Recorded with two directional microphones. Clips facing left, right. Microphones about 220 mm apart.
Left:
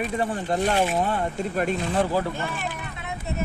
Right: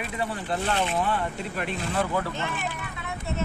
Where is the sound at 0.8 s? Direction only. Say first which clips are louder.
Left 2 dB; 40° left (ahead or behind).